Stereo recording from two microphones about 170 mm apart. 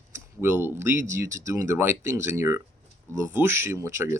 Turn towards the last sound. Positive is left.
turn(degrees=-15)  # may be behind; listen again after turning